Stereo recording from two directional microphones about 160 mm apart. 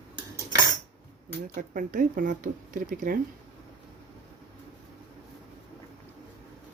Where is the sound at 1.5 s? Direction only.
55° right (ahead or behind).